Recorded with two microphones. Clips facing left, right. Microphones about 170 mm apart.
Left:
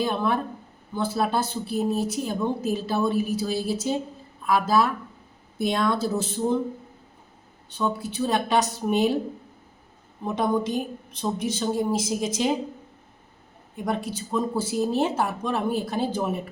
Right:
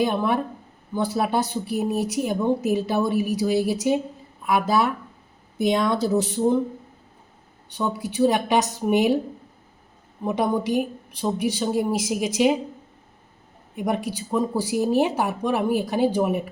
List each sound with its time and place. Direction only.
0.0 s speech: 15° right (ahead or behind)
7.8 s speech: 15° right (ahead or behind)
10.2 s speech: 10° right (ahead or behind)
13.8 s speech: 15° right (ahead or behind)